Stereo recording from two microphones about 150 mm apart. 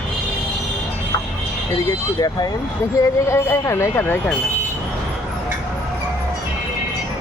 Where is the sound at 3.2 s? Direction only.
15° left (ahead or behind).